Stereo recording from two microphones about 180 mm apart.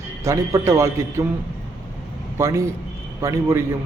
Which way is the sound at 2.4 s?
15° right (ahead or behind).